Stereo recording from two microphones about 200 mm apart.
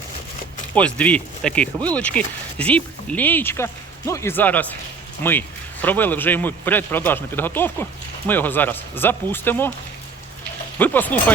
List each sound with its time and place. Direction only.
0.7 s speech: 5° left (ahead or behind)
10.8 s speech: 10° left (ahead or behind)